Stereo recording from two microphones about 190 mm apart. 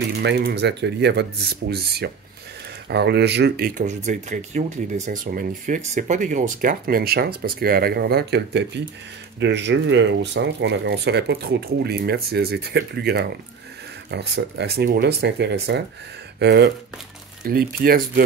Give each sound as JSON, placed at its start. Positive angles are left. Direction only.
{"t": 0.2, "sound": "speech", "side_deg": -65}